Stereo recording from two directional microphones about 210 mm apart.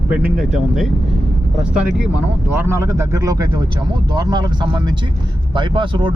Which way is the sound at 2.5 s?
10° right (ahead or behind).